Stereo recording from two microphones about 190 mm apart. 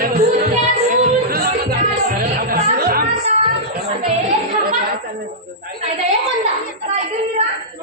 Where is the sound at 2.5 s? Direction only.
50° right (ahead or behind).